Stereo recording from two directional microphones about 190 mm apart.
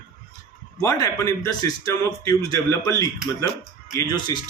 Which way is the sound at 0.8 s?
20° left (ahead or behind).